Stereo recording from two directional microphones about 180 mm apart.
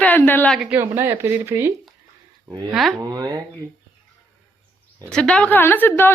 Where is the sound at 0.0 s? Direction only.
10° left (ahead or behind).